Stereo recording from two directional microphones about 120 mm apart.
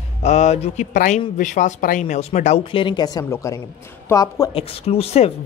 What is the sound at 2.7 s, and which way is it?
Speech, 40° left (ahead or behind).